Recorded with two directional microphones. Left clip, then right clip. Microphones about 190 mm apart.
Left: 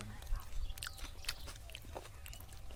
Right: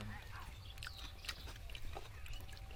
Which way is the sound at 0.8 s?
60° left (ahead or behind).